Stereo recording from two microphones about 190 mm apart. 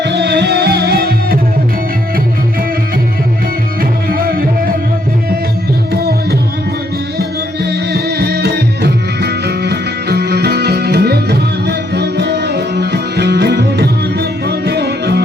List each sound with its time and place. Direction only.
0.0 s music: 65° right (ahead or behind)
3.8 s music: 50° right (ahead or behind)
7.2 s music: 60° right (ahead or behind)